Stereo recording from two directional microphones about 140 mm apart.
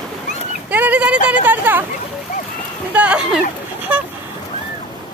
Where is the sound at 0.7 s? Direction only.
10° right (ahead or behind).